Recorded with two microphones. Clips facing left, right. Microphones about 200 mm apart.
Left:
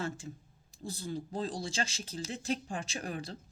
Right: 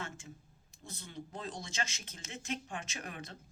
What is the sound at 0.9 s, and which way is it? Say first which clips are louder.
Speech: left 8 dB; 35° left (ahead or behind).